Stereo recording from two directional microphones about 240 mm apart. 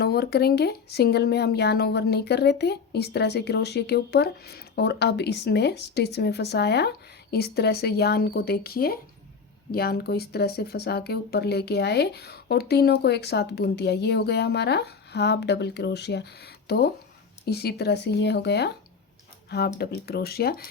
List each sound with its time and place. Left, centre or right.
0.0 s speech: left